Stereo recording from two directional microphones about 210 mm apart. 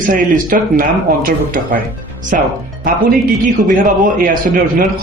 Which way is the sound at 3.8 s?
40° right (ahead or behind).